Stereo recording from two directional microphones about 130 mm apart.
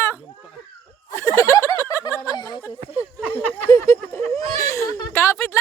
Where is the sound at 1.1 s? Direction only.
20° left (ahead or behind).